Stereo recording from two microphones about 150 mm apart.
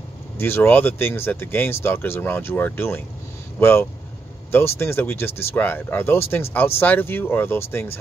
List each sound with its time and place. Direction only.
0.4 s speech: 15° left (ahead or behind)